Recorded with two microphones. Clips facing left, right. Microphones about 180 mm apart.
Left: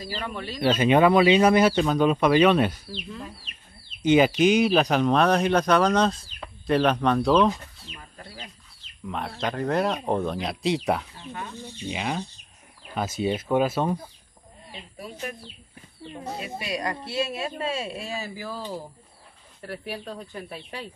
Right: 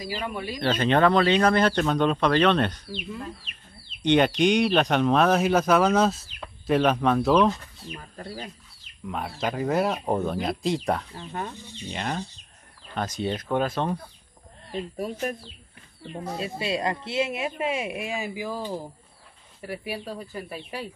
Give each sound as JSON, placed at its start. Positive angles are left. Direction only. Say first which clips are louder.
{"t": 0.0, "sound": "speech", "louder": "right 2 dB", "side_deg": -10}
{"t": 0.6, "sound": "speech", "louder": "left 3 dB", "side_deg": 10}
{"t": 4.0, "sound": "speech", "louder": "left 2 dB", "side_deg": 5}
{"t": 9.0, "sound": "speech", "louder": "even", "side_deg": -5}
{"t": 14.7, "sound": "a woman's voice", "louder": "right 9 dB", "side_deg": -45}
{"t": 16.3, "sound": "speech", "louder": "right 4 dB", "side_deg": -25}